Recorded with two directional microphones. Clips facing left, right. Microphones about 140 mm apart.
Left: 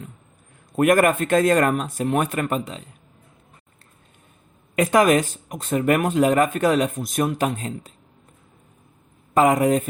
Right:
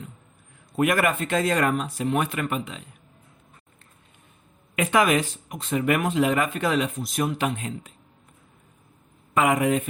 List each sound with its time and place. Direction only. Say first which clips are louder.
0.8 s speech: left 5 dB; 45° left (ahead or behind)
4.7 s speech: left 4 dB; 40° left (ahead or behind)
9.3 s speech: left 4 dB; 35° left (ahead or behind)